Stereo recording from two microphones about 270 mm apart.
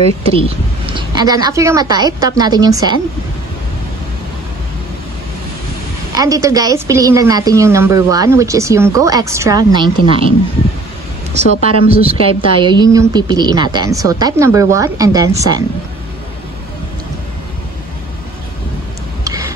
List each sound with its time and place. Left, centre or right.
0.3 s a woman's voice: centre
6.1 s a woman's voice: centre
11.4 s speech: left
11.9 s a woman's voice: right
19.2 s a sound: centre